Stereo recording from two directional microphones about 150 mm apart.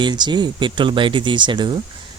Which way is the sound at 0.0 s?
30° right (ahead or behind).